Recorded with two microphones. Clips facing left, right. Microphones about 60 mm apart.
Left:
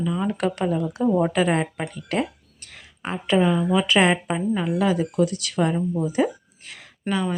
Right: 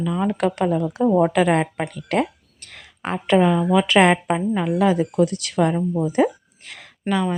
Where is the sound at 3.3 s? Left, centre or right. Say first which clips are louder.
Right 3 dB; right.